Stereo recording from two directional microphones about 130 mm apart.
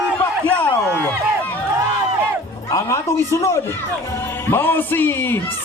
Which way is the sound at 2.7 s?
25° left (ahead or behind).